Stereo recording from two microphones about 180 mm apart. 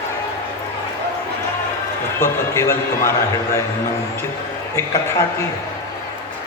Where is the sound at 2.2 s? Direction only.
15° left (ahead or behind).